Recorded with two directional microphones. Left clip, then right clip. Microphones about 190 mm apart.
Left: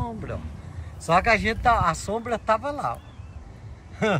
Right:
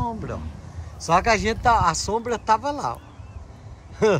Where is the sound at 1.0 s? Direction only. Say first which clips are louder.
Right 1 dB; 10° right (ahead or behind).